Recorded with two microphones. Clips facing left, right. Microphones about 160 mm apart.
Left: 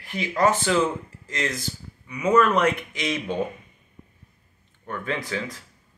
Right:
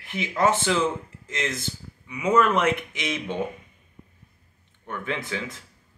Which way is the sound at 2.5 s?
20° right (ahead or behind).